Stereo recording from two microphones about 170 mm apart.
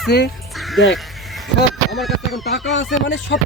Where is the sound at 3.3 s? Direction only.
90° left.